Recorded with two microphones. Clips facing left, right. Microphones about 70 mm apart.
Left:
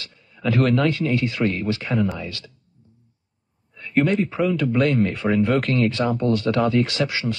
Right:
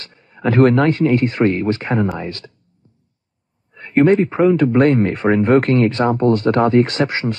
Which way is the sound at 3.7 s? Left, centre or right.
Right.